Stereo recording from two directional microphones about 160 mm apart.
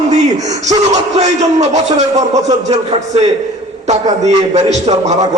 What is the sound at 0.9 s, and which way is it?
A man's voice, 45° right (ahead or behind).